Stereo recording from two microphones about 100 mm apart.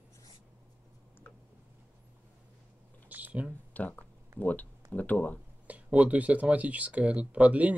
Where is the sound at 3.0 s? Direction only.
15° right (ahead or behind).